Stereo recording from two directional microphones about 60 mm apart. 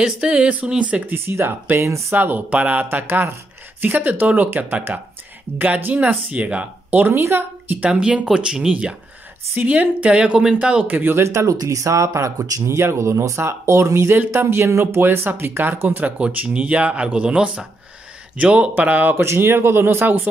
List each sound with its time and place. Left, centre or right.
0.0 s speech: centre
1.0 s speech: right
2.1 s speech: right
7.1 s speech: right
7.6 s speech: right
7.9 s speech: centre
9.6 s speech: right
10.9 s speech: right
11.5 s speech: right
15.0 s speech: right
19.1 s speech: right